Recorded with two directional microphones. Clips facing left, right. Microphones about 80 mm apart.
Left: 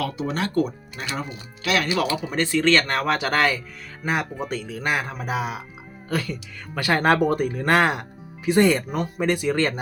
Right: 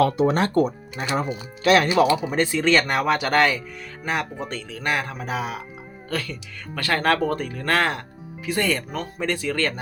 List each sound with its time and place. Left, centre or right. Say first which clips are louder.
0.0 s speech: right 7 dB; right
2.2 s speech: even; centre